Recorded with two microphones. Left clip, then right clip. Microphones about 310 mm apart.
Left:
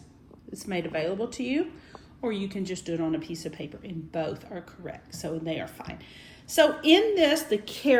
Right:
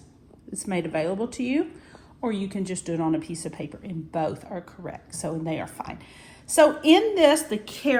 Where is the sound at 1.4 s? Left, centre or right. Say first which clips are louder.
Right 3 dB; right.